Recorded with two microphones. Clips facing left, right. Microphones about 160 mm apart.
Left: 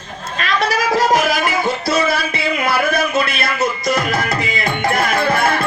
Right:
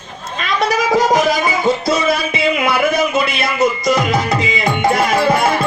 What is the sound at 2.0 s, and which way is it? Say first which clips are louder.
Speech: right 3 dB; 20° right (ahead or behind).